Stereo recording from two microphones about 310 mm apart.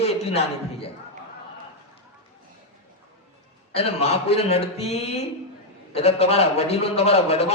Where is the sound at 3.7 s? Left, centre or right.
Centre.